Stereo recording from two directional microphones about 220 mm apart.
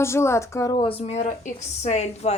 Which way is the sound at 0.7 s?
25° left (ahead or behind).